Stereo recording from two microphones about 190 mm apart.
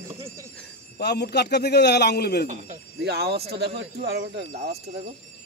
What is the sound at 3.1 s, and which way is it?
Speech, 55° right (ahead or behind).